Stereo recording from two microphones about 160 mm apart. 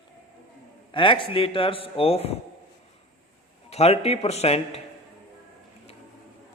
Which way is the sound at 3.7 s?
40° left (ahead or behind).